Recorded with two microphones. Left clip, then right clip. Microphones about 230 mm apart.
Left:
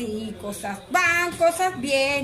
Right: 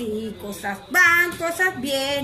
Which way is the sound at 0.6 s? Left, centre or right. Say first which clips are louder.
Right 4 dB; centre.